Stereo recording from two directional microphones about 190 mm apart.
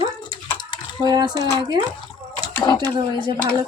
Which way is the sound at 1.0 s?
20° right (ahead or behind).